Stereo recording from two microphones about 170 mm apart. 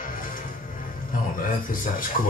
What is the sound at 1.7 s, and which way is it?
Speech, 55° left (ahead or behind).